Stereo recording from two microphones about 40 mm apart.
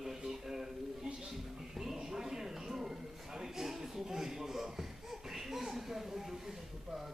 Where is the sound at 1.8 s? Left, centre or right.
Centre.